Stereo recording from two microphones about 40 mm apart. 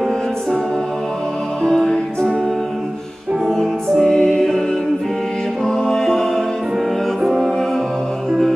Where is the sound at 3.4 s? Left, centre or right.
Centre.